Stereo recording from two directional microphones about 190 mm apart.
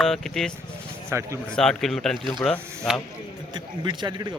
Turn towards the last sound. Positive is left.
turn(degrees=-20)  # may be behind; listen again after turning